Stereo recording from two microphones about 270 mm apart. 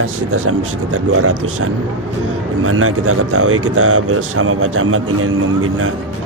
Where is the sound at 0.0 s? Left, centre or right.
Right.